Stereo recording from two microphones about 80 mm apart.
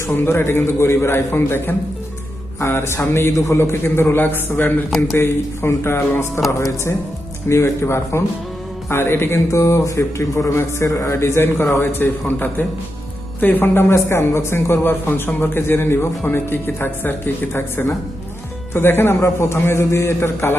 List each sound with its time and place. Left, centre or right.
0.1 s a man's voice: left
4.9 s speech: centre
5.1 s a man's voice: left